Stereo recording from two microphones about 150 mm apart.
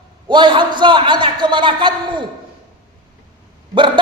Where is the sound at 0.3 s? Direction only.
30° right (ahead or behind).